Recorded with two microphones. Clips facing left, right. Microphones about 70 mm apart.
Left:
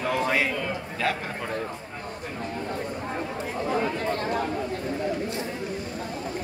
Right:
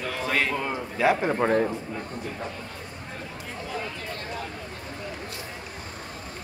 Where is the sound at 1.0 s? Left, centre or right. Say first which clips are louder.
Right 7 dB; centre.